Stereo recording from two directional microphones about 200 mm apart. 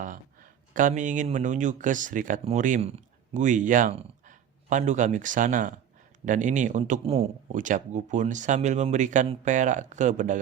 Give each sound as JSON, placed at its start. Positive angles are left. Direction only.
{"t": 0.0, "sound": "a man's voice", "side_deg": -40}